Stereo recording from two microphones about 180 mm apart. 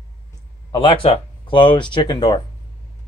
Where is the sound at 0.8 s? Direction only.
30° left (ahead or behind).